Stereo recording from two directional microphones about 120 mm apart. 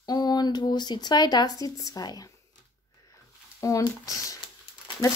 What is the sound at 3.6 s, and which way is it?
Speech, 25° left (ahead or behind).